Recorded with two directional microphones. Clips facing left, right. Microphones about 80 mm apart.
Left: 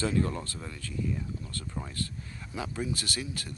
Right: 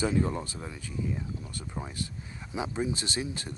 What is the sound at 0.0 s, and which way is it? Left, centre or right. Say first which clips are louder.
Speech: right 1 dB; centre.